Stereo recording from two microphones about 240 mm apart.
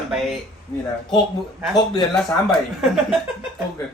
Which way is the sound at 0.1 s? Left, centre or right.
Centre.